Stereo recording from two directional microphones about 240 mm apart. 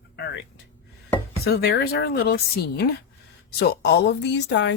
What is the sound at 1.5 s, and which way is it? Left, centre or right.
Speech, left.